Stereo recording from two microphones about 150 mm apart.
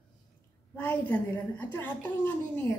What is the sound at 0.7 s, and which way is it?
Speech, 10° left (ahead or behind).